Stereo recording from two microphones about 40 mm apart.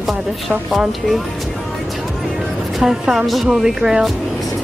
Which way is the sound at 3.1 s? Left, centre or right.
Centre.